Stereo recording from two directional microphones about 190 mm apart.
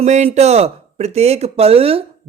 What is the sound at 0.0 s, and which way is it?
A man's voice, 35° right (ahead or behind).